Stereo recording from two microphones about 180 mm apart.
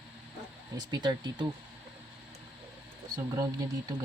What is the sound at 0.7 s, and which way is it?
Speech, 25° right (ahead or behind).